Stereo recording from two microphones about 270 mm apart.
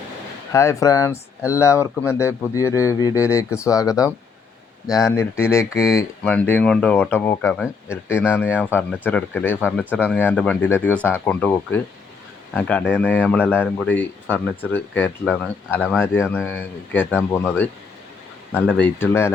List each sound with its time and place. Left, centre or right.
0.5 s speech: centre
18.5 s speech: centre